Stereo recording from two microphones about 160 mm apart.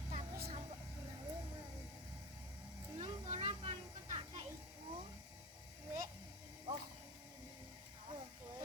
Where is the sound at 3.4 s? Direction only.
35° right (ahead or behind).